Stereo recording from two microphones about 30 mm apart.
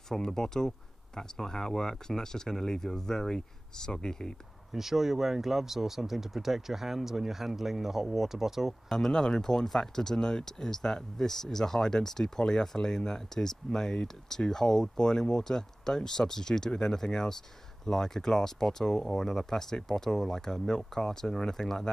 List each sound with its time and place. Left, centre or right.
0.1 s speech: centre
4.7 s speech: centre
8.8 s speech: centre